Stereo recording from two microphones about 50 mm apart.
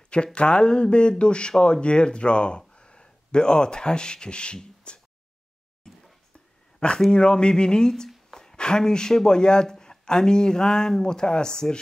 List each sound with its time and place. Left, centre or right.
0.1 s speech: left
7.1 s speech: centre
7.9 s a sound: centre
8.5 s speech: centre